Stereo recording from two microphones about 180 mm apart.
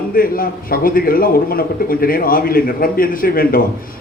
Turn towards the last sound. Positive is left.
turn(degrees=55)  # may be behind; listen again after turning